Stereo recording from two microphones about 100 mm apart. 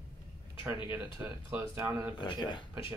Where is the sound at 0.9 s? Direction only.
20° right (ahead or behind).